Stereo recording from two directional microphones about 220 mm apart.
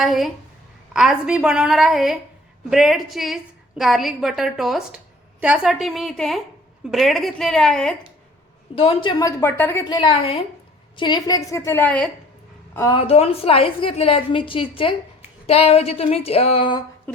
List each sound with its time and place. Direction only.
0.0 s a woman's voice: centre (ahead or behind)
8.7 s a woman's voice: 25° left (ahead or behind); by 12.1 s 5° left (ahead or behind)
12.7 s a woman's voice: 20° left (ahead or behind)